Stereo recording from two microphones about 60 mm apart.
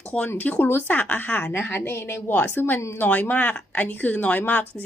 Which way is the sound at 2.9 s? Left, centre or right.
Left.